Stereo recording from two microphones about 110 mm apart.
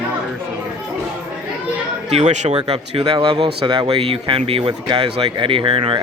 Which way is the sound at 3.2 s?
55° right (ahead or behind).